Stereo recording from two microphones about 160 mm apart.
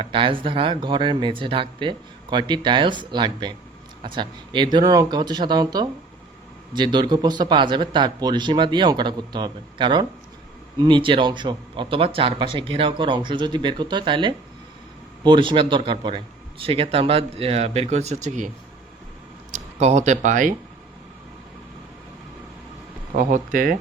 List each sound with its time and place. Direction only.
0.0 s speech: 35° right (ahead or behind); by 20.6 s 55° right (ahead or behind)
23.1 s speech: 55° right (ahead or behind)